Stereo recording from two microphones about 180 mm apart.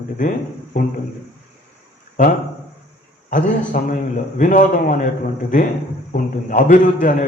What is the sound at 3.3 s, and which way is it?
A man's voice, 45° left (ahead or behind).